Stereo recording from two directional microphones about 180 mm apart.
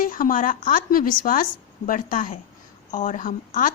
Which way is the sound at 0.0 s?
50° left (ahead or behind).